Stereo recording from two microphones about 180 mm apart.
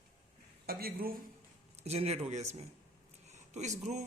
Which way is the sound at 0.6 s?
55° right (ahead or behind).